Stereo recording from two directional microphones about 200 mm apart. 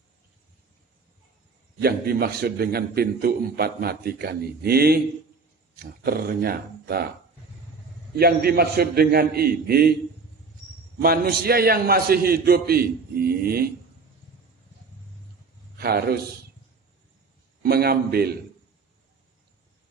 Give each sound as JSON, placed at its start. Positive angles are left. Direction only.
{"t": 1.8, "sound": "a man's voice", "side_deg": -50}
{"t": 8.2, "sound": "a man's voice", "side_deg": -50}
{"t": 11.0, "sound": "a man's voice", "side_deg": -50}
{"t": 15.8, "sound": "a man's voice", "side_deg": -50}
{"t": 17.6, "sound": "a man's voice", "side_deg": -50}